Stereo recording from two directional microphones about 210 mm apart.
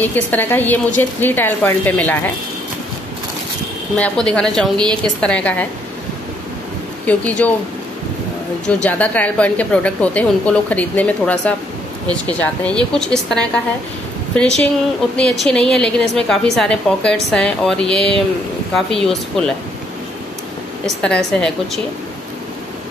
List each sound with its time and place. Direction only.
0.0 s a woman's voice: 10° left (ahead or behind)
3.9 s a woman's voice: 5° left (ahead or behind)
7.1 s a woman's voice: 5° left (ahead or behind)
8.8 s a woman's voice: 5° left (ahead or behind)
20.8 s a woman's voice: 5° left (ahead or behind)